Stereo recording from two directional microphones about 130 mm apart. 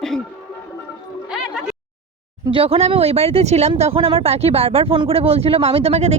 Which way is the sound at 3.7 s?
45° right (ahead or behind).